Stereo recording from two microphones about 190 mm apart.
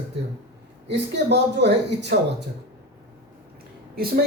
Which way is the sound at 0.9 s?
65° right (ahead or behind).